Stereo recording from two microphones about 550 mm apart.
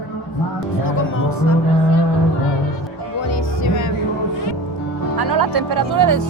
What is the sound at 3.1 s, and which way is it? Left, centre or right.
Music, left.